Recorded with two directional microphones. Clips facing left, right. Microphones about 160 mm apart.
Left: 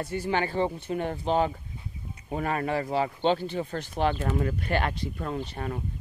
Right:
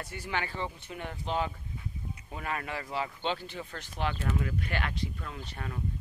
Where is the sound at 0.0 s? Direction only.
30° left (ahead or behind).